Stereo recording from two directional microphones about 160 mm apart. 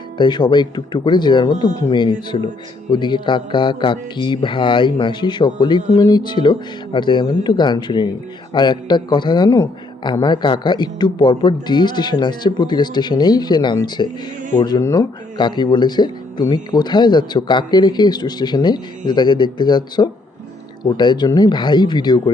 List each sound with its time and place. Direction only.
0.2 s a man's voice: 30° left (ahead or behind)